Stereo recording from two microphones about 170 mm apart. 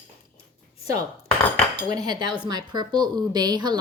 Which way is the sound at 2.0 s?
25° right (ahead or behind).